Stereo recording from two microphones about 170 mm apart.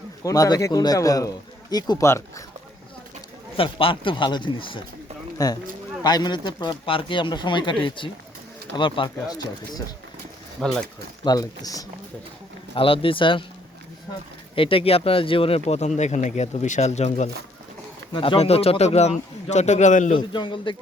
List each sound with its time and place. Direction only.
0.2 s speech: 20° left (ahead or behind)
3.6 s speech: 30° left (ahead or behind)
10.6 s speech: 5° left (ahead or behind)
11.2 s speech: 20° left (ahead or behind)
12.7 s speech: 30° left (ahead or behind)
14.5 s speech: 30° left (ahead or behind)
18.1 s speech: 30° left (ahead or behind); by 20.1 s 45° left (ahead or behind)
20.1 s speech: 30° left (ahead or behind)